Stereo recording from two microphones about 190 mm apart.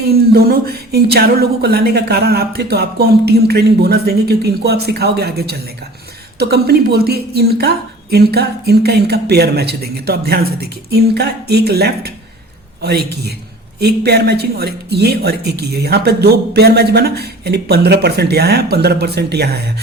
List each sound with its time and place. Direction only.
0.0 s speech: 55° right (ahead or behind)